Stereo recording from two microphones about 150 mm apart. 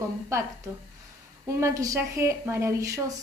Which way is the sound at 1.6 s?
20° right (ahead or behind).